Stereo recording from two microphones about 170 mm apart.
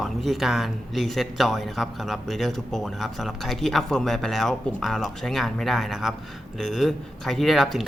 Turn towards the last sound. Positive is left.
turn(degrees=0)  # may be behind; listen again after turning